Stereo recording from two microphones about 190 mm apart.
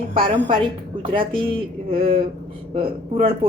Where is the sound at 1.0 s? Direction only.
25° right (ahead or behind).